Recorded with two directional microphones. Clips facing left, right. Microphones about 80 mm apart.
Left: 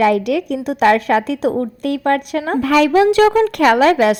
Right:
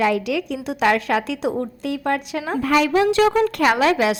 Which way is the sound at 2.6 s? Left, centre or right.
Left.